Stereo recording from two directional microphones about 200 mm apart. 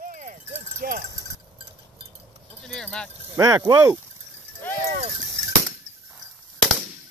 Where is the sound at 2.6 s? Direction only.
5° left (ahead or behind).